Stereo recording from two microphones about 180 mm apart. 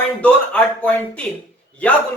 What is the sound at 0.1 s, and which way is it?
Speech, 5° left (ahead or behind).